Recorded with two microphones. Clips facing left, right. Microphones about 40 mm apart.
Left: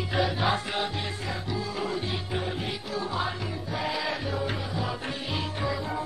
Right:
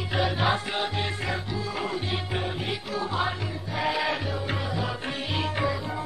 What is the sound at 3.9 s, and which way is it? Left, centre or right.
Music, right.